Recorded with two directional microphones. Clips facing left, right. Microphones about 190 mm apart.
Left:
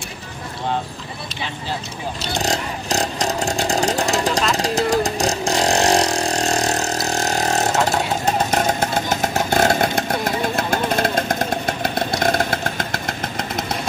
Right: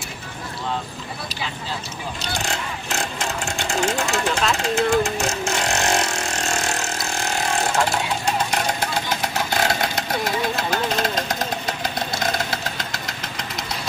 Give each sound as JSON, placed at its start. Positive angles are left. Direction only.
{"t": 2.4, "sound": "vehicle", "side_deg": 35}
{"t": 4.6, "sound": "speech", "side_deg": 35}
{"t": 4.9, "sound": "vehicle", "side_deg": 35}